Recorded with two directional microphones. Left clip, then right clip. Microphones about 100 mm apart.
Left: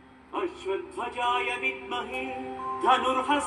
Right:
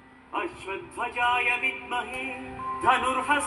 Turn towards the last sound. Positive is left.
turn(degrees=15)  # may be behind; listen again after turning